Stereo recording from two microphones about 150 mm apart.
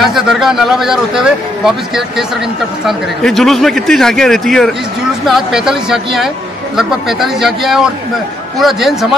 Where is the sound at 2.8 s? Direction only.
Centre (ahead or behind).